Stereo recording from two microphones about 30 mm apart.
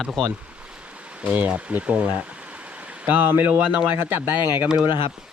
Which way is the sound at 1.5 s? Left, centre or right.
Right.